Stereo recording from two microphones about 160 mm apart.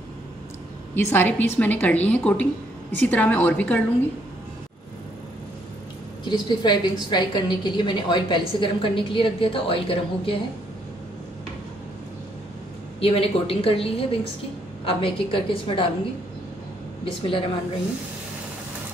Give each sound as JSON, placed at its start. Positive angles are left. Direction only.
{"t": 0.9, "sound": "a woman's voice", "side_deg": 10}
{"t": 6.2, "sound": "a woman's voice", "side_deg": 30}
{"t": 13.0, "sound": "a woman's voice", "side_deg": 35}
{"t": 17.0, "sound": "a woman's voice", "side_deg": 35}